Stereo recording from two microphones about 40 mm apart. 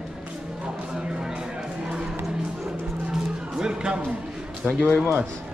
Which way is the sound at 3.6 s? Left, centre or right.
Centre.